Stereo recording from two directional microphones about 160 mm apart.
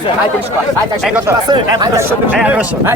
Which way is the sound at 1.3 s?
20° right (ahead or behind).